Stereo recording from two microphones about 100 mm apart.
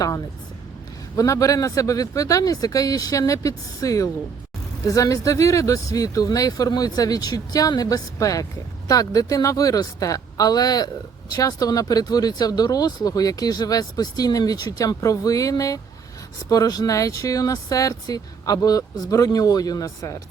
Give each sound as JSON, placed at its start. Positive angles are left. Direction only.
{"t": 1.1, "sound": "speech", "side_deg": 35}